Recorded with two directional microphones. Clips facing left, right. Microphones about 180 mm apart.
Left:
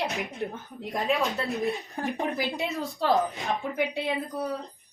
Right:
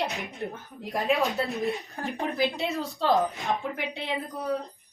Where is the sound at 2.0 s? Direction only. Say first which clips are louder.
Left 2 dB; 20° left (ahead or behind).